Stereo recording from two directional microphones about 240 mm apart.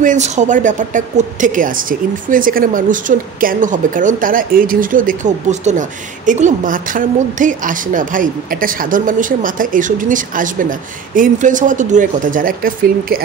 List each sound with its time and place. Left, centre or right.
0.0 s speech: right